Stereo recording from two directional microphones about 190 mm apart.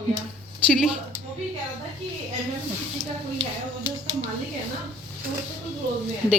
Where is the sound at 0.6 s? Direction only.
Centre (ahead or behind).